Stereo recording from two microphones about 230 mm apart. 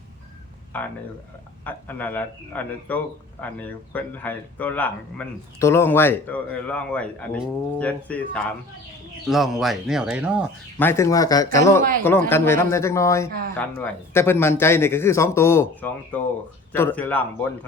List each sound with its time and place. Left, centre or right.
0.7 s a man's voice: centre
10.8 s a man's voice: centre
11.8 s speech: right
12.3 s a man's voice: centre